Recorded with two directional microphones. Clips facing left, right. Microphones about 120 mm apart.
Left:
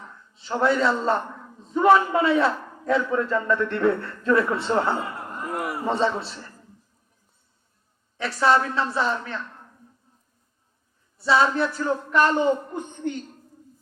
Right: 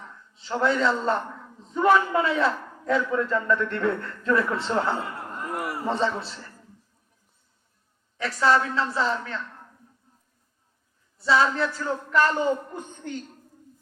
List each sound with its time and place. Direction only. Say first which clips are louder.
0.3 s a man's voice: left 2 dB; 25° left (ahead or behind)
8.2 s a man's voice: left 1 dB; 25° left (ahead or behind)
11.2 s a man's voice: left 2 dB; 25° left (ahead or behind)